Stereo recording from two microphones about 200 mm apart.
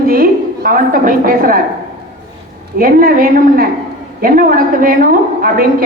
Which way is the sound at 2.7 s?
45° right (ahead or behind).